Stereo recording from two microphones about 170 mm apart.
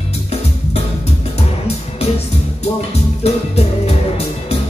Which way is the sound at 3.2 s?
35° left (ahead or behind).